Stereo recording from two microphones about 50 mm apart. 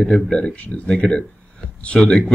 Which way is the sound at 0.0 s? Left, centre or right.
Centre.